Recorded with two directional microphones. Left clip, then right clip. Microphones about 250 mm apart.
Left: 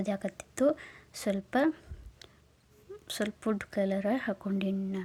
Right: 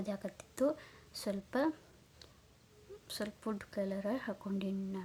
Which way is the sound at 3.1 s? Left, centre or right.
Centre.